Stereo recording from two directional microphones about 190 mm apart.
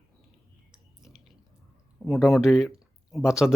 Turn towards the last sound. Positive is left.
turn(degrees=0)  # may be behind; listen again after turning